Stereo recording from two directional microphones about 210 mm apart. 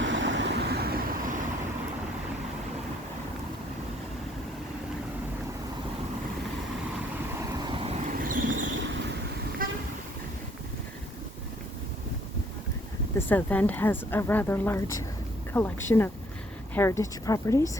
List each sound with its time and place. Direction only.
0.0 s vehicle: 60° right (ahead or behind)
7.6 s vehicle: 25° right (ahead or behind); by 8.4 s 40° right (ahead or behind)
8.4 s vehicle: 60° right (ahead or behind)
9.6 s vehicle: 40° right (ahead or behind)
13.1 s a woman's voice: 10° left (ahead or behind)